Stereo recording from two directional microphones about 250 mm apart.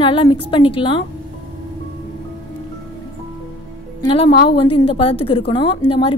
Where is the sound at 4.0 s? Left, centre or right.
Centre.